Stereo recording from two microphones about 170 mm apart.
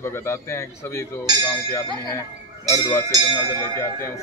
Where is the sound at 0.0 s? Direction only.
15° left (ahead or behind).